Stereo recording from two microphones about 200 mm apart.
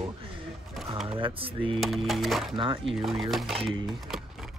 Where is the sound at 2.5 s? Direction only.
25° right (ahead or behind).